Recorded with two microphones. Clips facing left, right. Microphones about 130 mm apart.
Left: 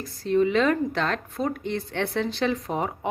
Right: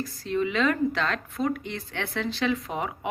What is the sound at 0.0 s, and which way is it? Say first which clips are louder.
Speech: left 5 dB; 50° left (ahead or behind).